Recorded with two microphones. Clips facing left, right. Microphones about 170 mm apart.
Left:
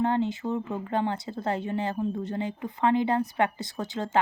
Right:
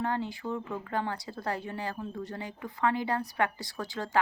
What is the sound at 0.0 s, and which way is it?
Speech, 20° left (ahead or behind).